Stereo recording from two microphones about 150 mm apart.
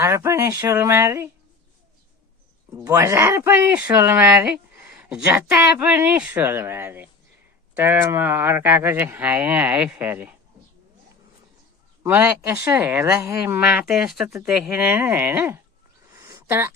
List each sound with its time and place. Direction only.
0.0 s speech: 15° right (ahead or behind)
2.8 s speech: 20° right (ahead or behind)
12.0 s speech: 10° right (ahead or behind)
16.1 s a sound: 20° right (ahead or behind)